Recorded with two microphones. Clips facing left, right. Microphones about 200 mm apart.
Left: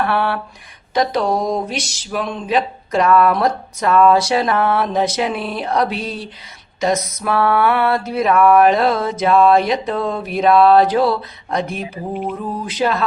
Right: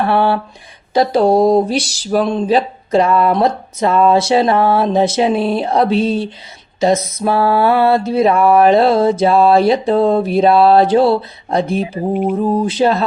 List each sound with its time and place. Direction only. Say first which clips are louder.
0.0 s speech: right 5 dB; 30° right (ahead or behind)